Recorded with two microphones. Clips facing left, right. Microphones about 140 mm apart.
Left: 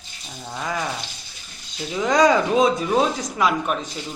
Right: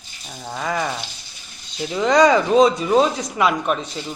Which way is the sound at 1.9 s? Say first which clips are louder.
Right 2 dB; centre (ahead or behind).